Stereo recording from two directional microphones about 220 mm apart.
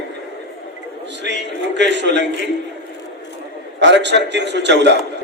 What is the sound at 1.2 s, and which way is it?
A man's voice, 50° right (ahead or behind).